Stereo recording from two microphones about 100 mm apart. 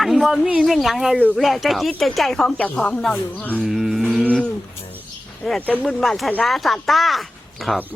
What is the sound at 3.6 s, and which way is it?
Mantra, 5° right (ahead or behind).